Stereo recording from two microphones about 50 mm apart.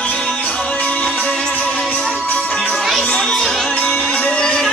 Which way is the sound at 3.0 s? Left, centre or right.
Centre.